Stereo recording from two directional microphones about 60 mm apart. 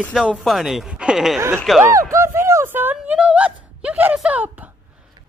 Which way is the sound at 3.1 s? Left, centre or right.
Centre.